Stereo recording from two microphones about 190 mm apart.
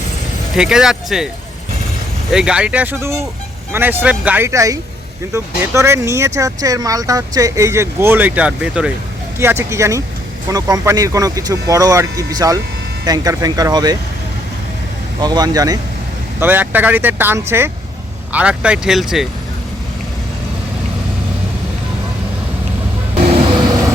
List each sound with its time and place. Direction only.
0.5 s speech: 5° right (ahead or behind)
2.3 s speech: 5° right (ahead or behind); by 13.9 s 20° right (ahead or behind)
15.2 s speech: 20° right (ahead or behind); by 19.3 s centre (ahead or behind)